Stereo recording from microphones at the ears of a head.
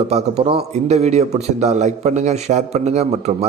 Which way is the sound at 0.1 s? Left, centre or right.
Right.